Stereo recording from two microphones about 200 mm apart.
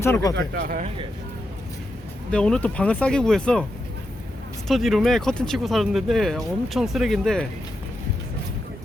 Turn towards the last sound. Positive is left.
turn(degrees=0)  # may be behind; listen again after turning